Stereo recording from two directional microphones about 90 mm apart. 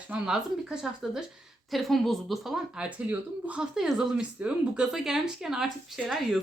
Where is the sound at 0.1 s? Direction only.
10° right (ahead or behind).